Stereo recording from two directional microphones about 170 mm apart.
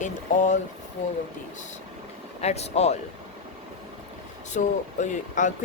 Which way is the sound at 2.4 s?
40° left (ahead or behind).